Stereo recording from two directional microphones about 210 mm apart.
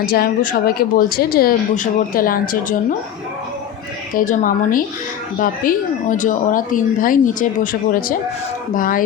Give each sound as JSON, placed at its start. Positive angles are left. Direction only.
{"t": 0.0, "sound": "speech", "side_deg": 45}
{"t": 4.3, "sound": "speech", "side_deg": 40}